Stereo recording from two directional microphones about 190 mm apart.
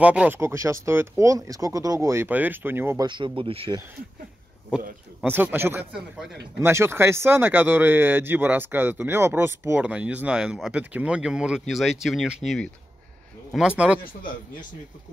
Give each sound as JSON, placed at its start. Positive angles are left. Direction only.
{"t": 0.0, "sound": "speech", "side_deg": -5}
{"t": 3.1, "sound": "speech", "side_deg": -25}
{"t": 5.2, "sound": "speech", "side_deg": -10}